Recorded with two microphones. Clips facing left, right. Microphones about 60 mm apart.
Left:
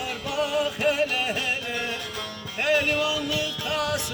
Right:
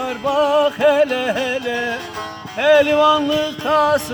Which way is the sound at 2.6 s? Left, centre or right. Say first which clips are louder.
Right 11 dB; right.